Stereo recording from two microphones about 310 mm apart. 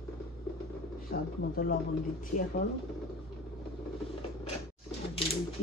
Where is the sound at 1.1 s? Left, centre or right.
Left.